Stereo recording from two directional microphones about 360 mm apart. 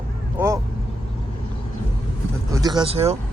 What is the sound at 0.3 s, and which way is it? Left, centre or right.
Speech, centre.